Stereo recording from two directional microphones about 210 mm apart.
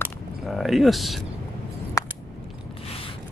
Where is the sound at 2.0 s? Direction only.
15° left (ahead or behind).